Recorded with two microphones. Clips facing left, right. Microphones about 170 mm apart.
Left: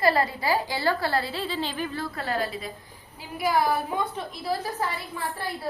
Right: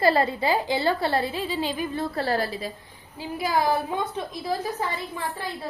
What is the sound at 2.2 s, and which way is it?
Speech, 35° right (ahead or behind).